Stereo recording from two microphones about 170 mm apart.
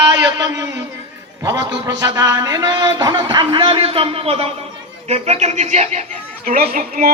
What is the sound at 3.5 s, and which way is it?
A man's voice, 30° right (ahead or behind).